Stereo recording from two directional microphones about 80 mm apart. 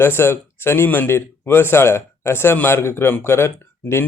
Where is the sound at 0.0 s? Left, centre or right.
Left.